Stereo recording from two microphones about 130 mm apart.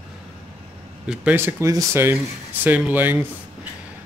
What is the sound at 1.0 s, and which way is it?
Speech, 5° right (ahead or behind).